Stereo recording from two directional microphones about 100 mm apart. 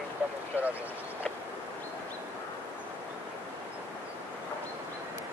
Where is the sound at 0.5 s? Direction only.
15° right (ahead or behind).